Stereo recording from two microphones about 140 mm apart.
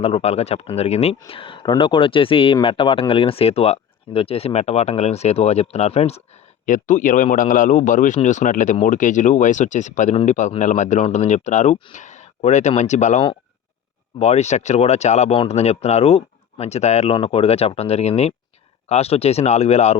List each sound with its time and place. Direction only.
0.0 s speech: 45° left (ahead or behind)
1.3 s speech: 40° left (ahead or behind)
6.7 s speech: 70° left (ahead or behind); by 20.0 s 50° left (ahead or behind)